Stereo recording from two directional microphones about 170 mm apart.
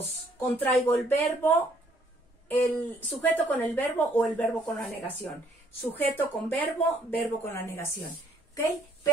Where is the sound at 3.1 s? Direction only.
10° left (ahead or behind).